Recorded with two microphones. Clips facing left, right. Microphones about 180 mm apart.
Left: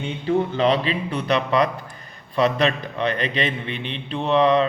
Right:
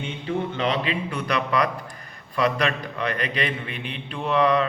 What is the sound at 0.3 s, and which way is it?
A man's voice, 35° left (ahead or behind).